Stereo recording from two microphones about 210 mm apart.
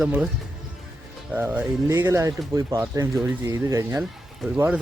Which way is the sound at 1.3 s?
5° right (ahead or behind).